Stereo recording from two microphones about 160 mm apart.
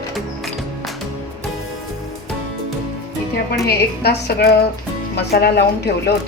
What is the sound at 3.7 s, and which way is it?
A woman's voice, 85° left.